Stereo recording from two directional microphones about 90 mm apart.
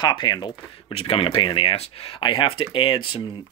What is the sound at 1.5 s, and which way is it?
Speech, 70° left (ahead or behind).